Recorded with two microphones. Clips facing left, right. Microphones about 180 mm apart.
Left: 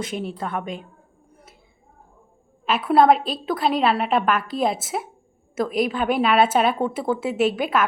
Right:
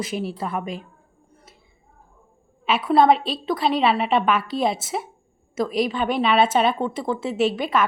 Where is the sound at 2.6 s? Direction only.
Centre (ahead or behind).